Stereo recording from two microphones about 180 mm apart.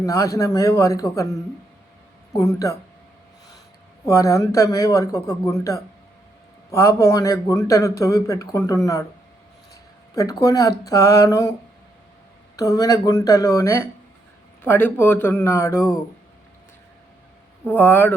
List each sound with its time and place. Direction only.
0.0 s a man's voice: 20° left (ahead or behind)
4.0 s a man's voice: 15° left (ahead or behind)
10.2 s speech: 20° left (ahead or behind)
12.5 s a man's voice: 20° left (ahead or behind)
17.7 s a man's voice: 10° left (ahead or behind)